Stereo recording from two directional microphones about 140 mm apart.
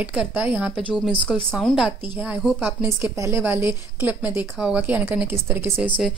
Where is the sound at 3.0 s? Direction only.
20° right (ahead or behind).